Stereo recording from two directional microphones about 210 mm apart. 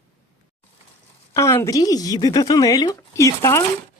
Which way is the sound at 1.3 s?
15° left (ahead or behind).